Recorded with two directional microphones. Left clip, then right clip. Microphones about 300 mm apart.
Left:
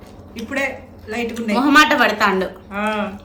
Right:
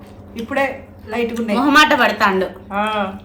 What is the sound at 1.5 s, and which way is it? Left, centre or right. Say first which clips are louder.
Speech: even; centre.